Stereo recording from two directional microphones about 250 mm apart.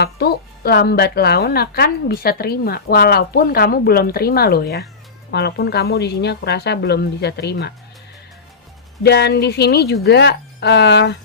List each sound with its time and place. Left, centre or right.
0.0 s a woman's voice: left
9.0 s a woman's voice: left